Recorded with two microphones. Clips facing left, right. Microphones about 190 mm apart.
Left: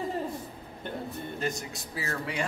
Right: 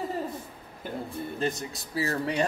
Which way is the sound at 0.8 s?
5° right (ahead or behind).